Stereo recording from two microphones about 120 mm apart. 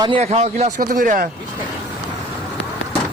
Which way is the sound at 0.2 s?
65° right (ahead or behind).